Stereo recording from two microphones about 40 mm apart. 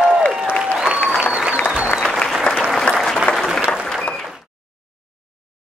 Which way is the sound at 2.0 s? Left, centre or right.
Centre.